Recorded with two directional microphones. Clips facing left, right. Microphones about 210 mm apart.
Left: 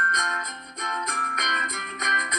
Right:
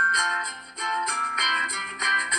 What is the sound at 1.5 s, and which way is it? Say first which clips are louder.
Music: left 3 dB; 55° left (ahead or behind).